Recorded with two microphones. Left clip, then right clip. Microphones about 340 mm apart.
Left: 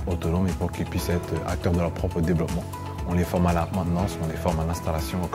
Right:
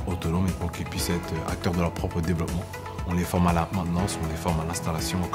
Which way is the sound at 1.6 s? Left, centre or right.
Left.